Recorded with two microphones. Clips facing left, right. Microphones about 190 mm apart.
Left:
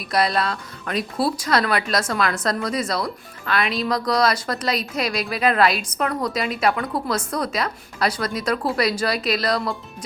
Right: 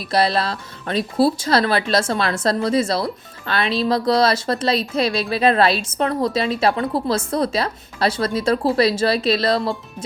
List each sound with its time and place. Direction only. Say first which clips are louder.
0.1 s speech: right 2 dB; 30° right (ahead or behind)